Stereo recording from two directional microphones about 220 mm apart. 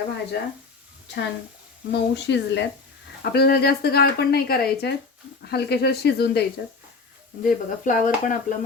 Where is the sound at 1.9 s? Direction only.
50° left (ahead or behind).